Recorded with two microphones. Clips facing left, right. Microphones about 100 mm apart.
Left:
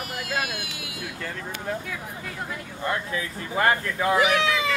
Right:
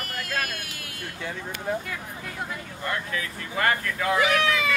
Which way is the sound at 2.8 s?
25° left (ahead or behind).